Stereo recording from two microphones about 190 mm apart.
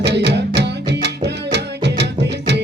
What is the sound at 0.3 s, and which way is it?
Music, 65° right (ahead or behind).